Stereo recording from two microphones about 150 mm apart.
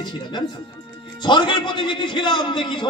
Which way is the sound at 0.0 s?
30° left (ahead or behind).